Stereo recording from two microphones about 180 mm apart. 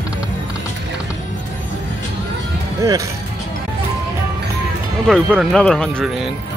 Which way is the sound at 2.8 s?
15° right (ahead or behind).